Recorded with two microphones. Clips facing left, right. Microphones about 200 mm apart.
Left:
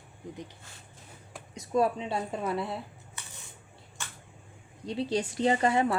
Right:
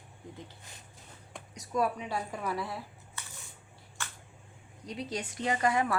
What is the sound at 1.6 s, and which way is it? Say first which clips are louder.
Speech: left 4 dB; 25° left (ahead or behind).